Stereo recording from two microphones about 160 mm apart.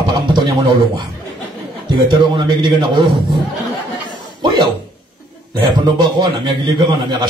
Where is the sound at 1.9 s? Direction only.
25° right (ahead or behind).